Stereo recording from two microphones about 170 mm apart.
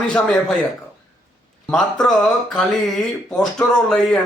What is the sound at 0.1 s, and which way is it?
Speech, 5° left (ahead or behind).